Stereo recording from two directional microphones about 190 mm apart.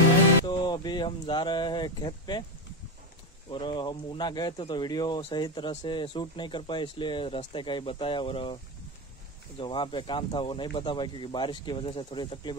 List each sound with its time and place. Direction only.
0.5 s speech: 25° left (ahead or behind)
3.4 s speech: 25° left (ahead or behind)
9.6 s speech: 25° left (ahead or behind)